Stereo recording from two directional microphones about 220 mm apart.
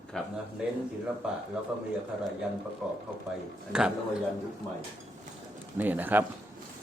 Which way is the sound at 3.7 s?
5° right (ahead or behind).